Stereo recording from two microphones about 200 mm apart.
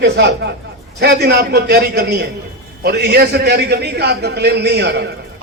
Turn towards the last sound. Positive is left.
turn(degrees=-55)  # may be behind; listen again after turning